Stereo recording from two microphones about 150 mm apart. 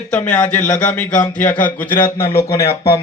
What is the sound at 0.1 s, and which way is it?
A man's voice, 10° left (ahead or behind).